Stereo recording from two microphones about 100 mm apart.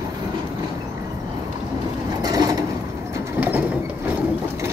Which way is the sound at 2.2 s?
40° right (ahead or behind).